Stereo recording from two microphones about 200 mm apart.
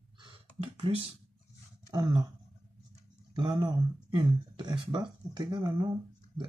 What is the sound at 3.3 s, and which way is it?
Speech, 20° right (ahead or behind).